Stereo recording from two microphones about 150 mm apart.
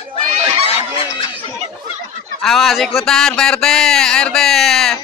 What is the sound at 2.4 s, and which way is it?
Speech, centre (ahead or behind).